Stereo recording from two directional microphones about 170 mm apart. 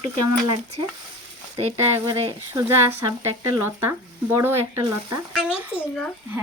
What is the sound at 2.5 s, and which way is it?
Speech, 15° right (ahead or behind).